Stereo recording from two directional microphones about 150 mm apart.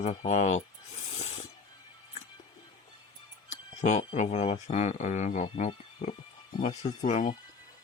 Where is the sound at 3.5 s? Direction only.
50° left (ahead or behind).